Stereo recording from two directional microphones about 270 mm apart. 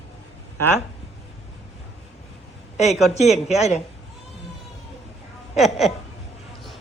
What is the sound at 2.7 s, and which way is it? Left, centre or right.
A woman's voice, left.